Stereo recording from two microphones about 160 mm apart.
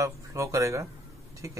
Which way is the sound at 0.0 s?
20° right (ahead or behind).